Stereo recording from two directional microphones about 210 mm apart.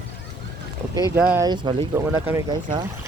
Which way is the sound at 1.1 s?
10° right (ahead or behind).